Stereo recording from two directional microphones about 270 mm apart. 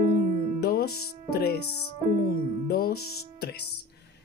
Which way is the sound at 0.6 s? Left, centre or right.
Left.